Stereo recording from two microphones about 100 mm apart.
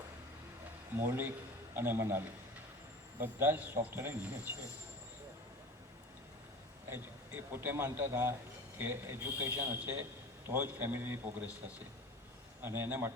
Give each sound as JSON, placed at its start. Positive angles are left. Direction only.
{"t": 0.9, "sound": "a man's voice", "side_deg": -20}
{"t": 6.9, "sound": "a man's voice", "side_deg": -20}
{"t": 12.6, "sound": "a man's voice", "side_deg": -25}